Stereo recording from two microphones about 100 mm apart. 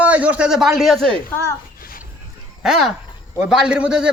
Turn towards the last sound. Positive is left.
turn(degrees=-10)  # may be behind; listen again after turning